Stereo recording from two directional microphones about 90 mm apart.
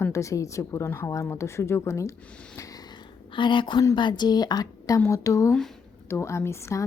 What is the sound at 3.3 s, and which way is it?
A woman's voice, 65° left (ahead or behind).